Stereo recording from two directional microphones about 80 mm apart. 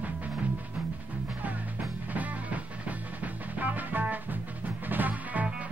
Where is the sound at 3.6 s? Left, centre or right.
Right.